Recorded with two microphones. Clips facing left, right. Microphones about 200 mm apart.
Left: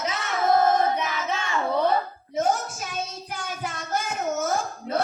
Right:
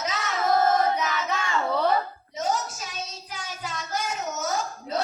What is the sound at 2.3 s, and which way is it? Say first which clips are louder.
Child singing: left 4 dB; 55° left (ahead or behind).